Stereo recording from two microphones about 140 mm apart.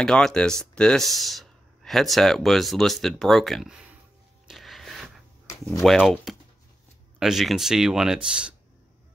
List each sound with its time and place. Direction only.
0.0 s speech: 5° left (ahead or behind)
4.5 s a sound: centre (ahead or behind)
5.7 s speech: centre (ahead or behind)